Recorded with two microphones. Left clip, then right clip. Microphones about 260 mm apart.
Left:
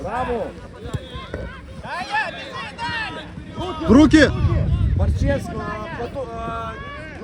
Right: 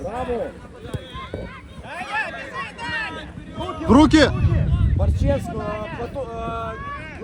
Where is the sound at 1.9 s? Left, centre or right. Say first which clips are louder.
Left 3 dB; left.